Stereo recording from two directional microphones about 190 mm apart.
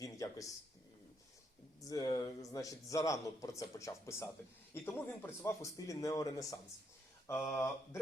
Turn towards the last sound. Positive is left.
turn(degrees=15)  # may be behind; listen again after turning